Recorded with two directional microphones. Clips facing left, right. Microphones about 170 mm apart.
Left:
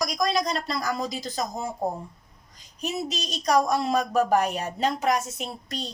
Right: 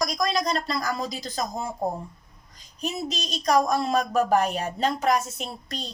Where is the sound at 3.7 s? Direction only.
15° left (ahead or behind).